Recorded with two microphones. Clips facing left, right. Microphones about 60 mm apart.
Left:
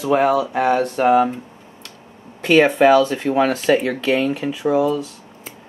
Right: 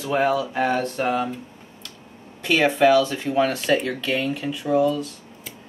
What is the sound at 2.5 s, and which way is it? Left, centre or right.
Speech, left.